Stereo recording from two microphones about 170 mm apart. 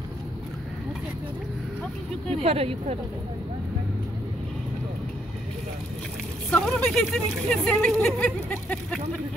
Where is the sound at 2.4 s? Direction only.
35° right (ahead or behind).